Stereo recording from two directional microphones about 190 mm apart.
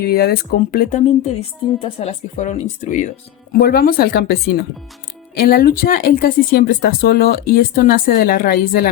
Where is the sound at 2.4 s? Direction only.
40° left (ahead or behind).